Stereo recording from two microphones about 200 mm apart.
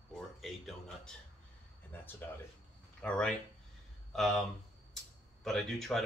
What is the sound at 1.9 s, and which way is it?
Speech, 10° left (ahead or behind).